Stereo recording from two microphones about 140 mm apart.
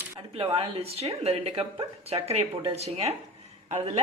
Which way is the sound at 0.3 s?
40° right (ahead or behind).